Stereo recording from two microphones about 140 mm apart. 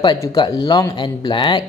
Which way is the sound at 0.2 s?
25° left (ahead or behind).